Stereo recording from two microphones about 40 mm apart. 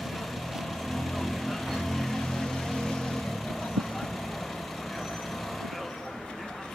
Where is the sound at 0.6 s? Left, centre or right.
Centre.